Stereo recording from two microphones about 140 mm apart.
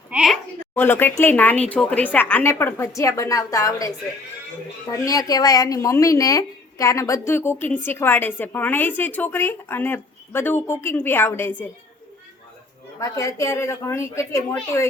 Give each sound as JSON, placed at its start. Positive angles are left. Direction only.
{"t": 0.1, "sound": "a sound", "side_deg": -5}
{"t": 0.8, "sound": "speech", "side_deg": 15}
{"t": 13.0, "sound": "speech", "side_deg": 20}